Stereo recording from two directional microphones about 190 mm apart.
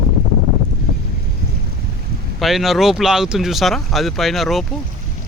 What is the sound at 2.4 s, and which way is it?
Speech, centre (ahead or behind).